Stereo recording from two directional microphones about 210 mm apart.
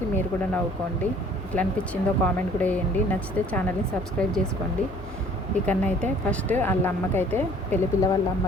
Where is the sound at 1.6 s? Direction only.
5° left (ahead or behind).